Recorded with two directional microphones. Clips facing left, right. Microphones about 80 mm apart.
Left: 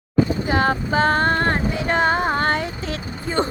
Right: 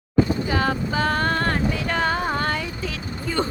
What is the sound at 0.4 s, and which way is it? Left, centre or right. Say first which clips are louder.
Music: left 3 dB; left.